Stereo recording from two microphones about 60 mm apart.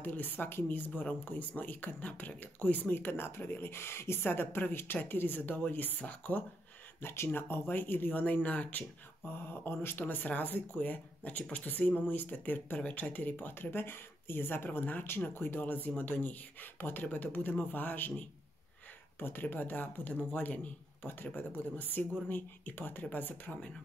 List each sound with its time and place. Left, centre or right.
0.0 s speech: left
7.0 s speech: left
9.3 s speech: left
21.0 s speech: left